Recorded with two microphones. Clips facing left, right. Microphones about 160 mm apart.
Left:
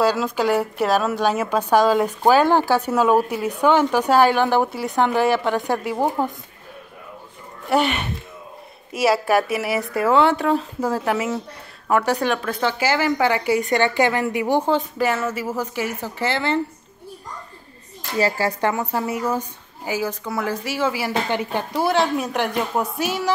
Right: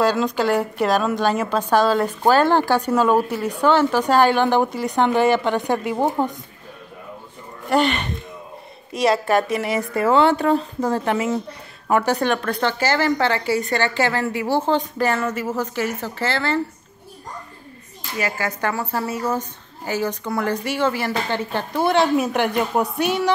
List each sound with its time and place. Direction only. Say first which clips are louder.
0.0 s a woman's voice: even; 10° left (ahead or behind)
7.7 s a woman's voice: right 1 dB; 10° left (ahead or behind)
14.7 s a woman's voice: even; 5° left (ahead or behind)
18.1 s speech: left 4 dB; 35° left (ahead or behind)
18.6 s a woman's voice: left 2 dB; 20° left (ahead or behind); by 23.3 s 5° left (ahead or behind)